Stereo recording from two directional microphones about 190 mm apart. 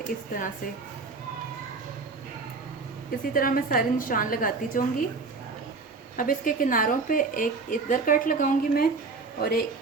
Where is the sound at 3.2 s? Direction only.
45° left (ahead or behind).